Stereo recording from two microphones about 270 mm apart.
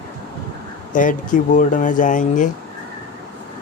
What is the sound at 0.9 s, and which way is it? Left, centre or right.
Speech, left.